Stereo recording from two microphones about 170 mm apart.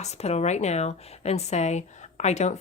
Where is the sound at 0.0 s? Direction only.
40° left (ahead or behind).